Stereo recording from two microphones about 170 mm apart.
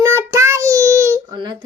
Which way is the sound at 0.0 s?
15° right (ahead or behind).